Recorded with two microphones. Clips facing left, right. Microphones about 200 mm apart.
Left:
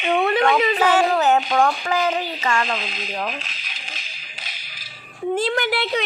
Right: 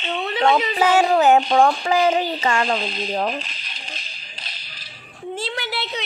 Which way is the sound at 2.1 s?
35° right (ahead or behind).